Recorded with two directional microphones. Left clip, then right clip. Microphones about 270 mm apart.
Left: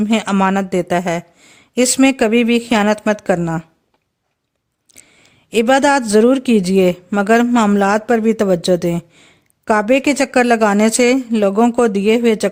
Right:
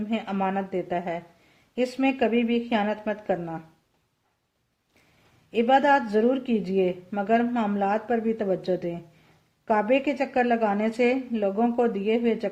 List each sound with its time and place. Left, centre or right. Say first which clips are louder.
0.1 s speech: left 11 dB; left
5.5 s speech: left 7 dB; left